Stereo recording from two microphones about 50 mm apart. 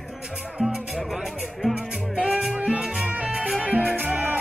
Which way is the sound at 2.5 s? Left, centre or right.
Right.